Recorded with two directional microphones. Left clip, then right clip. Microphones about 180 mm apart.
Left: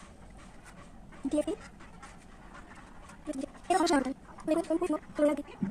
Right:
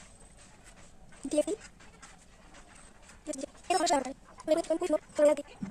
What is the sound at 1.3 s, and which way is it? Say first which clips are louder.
Speech: right 2 dB; 30° right (ahead or behind).